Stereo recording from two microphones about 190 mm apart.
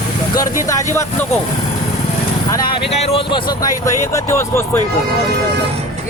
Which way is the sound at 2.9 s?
30° left (ahead or behind).